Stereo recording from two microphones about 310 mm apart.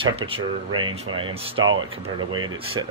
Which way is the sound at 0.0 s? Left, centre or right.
Centre.